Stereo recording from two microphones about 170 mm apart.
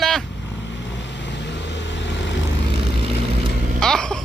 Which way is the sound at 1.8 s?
90° left.